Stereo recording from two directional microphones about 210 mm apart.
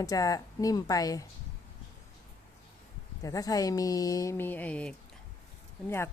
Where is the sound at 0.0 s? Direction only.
15° left (ahead or behind).